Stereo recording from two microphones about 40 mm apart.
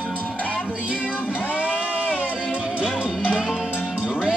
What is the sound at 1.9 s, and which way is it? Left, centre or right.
Music, right.